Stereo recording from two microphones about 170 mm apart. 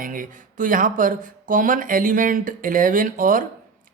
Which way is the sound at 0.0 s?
55° right (ahead or behind).